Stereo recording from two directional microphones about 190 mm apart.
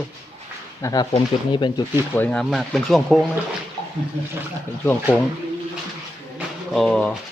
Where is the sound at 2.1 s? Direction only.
5° left (ahead or behind).